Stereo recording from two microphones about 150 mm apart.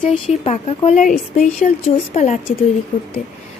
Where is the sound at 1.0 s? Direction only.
60° left (ahead or behind).